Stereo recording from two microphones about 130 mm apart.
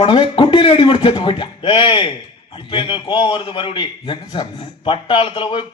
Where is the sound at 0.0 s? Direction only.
40° left (ahead or behind).